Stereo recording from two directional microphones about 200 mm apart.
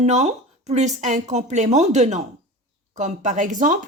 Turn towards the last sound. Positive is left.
turn(degrees=-40)  # may be behind; listen again after turning